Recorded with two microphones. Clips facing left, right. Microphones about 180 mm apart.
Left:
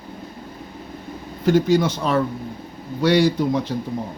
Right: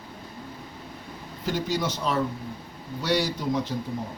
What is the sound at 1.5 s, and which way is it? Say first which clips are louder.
A man's voice: left 11 dB; 55° left (ahead or behind).